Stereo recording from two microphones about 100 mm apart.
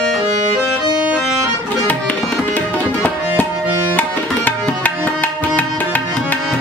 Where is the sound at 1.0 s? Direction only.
10° right (ahead or behind).